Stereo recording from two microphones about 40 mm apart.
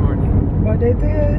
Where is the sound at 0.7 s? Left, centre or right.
Left.